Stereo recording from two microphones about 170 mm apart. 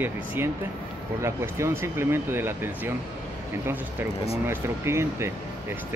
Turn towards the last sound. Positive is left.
turn(degrees=-15)  # may be behind; listen again after turning